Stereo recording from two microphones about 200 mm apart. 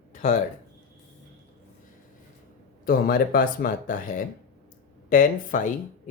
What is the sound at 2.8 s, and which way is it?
Speech, 45° left (ahead or behind).